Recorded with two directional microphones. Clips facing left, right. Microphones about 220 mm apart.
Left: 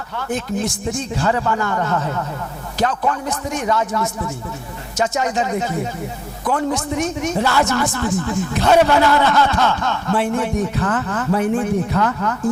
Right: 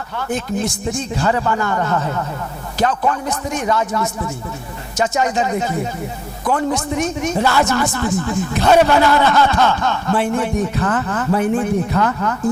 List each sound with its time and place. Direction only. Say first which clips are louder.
0.2 s speech: right 1 dB; 10° right (ahead or behind)
1.2 s speech: right 1 dB; 20° right (ahead or behind)
3.2 s speech: right 1 dB; 10° right (ahead or behind)
3.8 s speech: right 1 dB; 25° right (ahead or behind)
6.7 s speech: right 1 dB; 15° right (ahead or behind)